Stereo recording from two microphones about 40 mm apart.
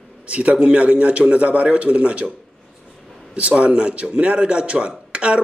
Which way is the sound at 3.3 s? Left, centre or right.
Right.